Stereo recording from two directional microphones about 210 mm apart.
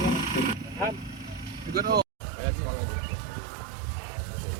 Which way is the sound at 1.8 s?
45° right (ahead or behind).